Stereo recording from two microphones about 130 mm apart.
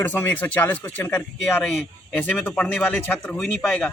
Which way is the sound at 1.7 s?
Centre (ahead or behind).